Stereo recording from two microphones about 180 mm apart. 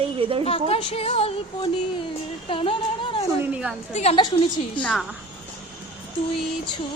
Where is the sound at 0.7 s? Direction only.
35° left (ahead or behind).